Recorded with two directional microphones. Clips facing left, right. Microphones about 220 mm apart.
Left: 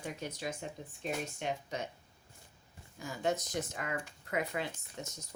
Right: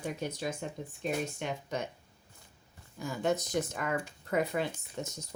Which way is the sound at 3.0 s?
55° right (ahead or behind).